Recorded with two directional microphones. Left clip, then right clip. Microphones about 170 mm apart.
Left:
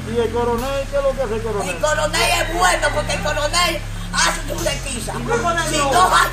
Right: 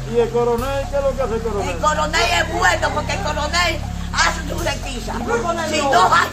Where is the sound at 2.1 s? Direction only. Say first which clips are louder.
Even; 5° left (ahead or behind).